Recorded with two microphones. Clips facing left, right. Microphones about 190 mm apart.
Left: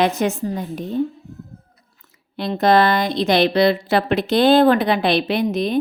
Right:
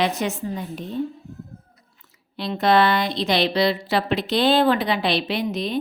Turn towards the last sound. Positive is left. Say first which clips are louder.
# left 5 dB
turn(degrees=50)  # may be behind; listen again after turning